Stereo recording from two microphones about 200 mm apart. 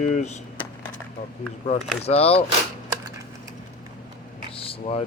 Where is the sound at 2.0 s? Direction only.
30° left (ahead or behind).